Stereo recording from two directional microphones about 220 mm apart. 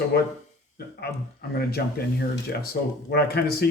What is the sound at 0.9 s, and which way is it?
Speech, 45° left (ahead or behind).